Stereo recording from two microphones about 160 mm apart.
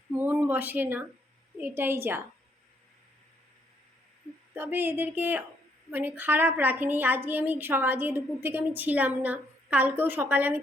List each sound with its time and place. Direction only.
0.1 s a woman's voice: 10° right (ahead or behind)
4.5 s a woman's voice: 15° right (ahead or behind)